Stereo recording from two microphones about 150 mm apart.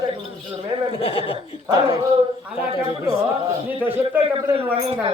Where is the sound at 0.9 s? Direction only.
35° left (ahead or behind).